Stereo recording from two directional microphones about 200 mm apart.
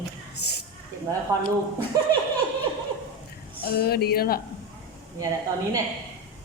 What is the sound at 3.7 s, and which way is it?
Speech, 50° left (ahead or behind).